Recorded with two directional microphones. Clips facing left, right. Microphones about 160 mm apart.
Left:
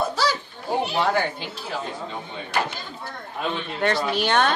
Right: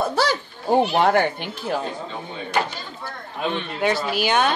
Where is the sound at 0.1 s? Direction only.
55° right (ahead or behind).